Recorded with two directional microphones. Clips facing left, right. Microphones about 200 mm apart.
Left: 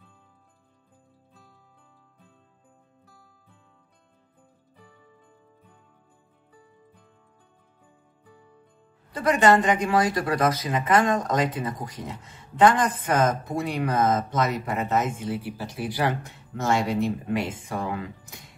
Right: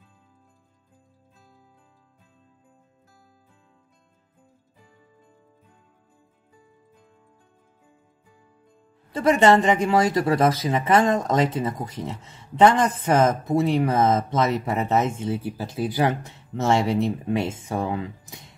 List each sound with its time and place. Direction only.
9.1 s speech: 25° right (ahead or behind)